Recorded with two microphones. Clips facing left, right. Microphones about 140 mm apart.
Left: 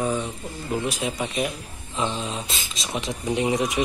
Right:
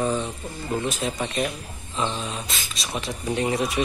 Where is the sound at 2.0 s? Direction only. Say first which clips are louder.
Left 1 dB; 20° left (ahead or behind).